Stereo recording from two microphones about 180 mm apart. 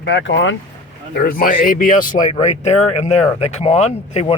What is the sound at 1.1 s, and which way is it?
A man's voice, 55° left (ahead or behind).